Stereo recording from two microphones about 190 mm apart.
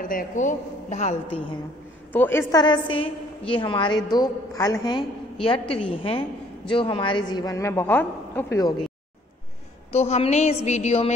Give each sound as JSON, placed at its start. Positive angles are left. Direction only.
{"t": 0.0, "sound": "a man's voice", "side_deg": 45}
{"t": 2.1, "sound": "a woman's voice", "side_deg": 10}
{"t": 9.9, "sound": "a man's voice", "side_deg": 35}